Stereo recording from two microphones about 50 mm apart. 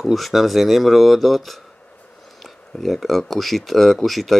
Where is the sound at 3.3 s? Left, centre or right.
Centre.